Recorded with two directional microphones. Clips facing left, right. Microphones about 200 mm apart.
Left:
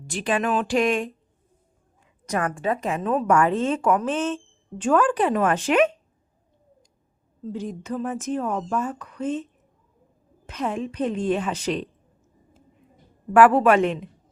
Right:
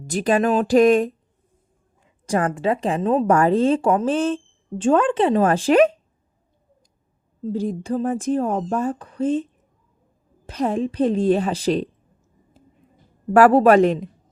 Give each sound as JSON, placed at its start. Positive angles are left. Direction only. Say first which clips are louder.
{"t": 0.1, "sound": "a woman's voice", "louder": "right 5 dB", "side_deg": -40}
{"t": 2.2, "sound": "a woman's voice", "louder": "right 4 dB", "side_deg": -30}
{"t": 7.4, "sound": "a woman's voice", "louder": "right 6 dB", "side_deg": -35}
{"t": 13.3, "sound": "a woman's voice", "louder": "right 3 dB", "side_deg": -35}